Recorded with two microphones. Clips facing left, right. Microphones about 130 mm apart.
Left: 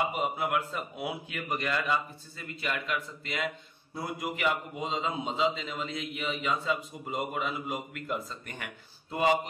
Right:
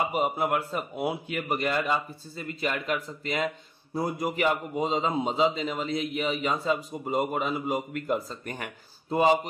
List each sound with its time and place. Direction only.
0.1 s a man's voice: 35° right (ahead or behind)